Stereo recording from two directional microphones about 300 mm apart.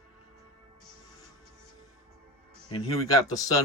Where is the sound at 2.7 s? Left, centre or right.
Centre.